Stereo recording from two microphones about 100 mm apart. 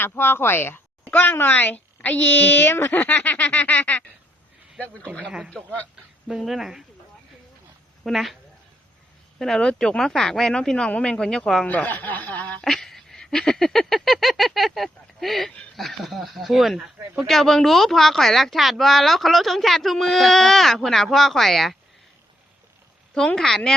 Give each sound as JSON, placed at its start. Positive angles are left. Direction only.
{"t": 0.0, "sound": "speech", "side_deg": 20}
{"t": 6.2, "sound": "speech", "side_deg": -5}
{"t": 8.0, "sound": "speech", "side_deg": 0}
{"t": 9.4, "sound": "speech", "side_deg": 5}
{"t": 12.7, "sound": "speech", "side_deg": 5}
{"t": 23.1, "sound": "speech", "side_deg": 5}